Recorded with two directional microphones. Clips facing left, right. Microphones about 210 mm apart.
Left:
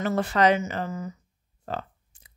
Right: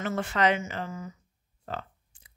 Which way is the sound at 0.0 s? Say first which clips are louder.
Left 4 dB; 35° left (ahead or behind).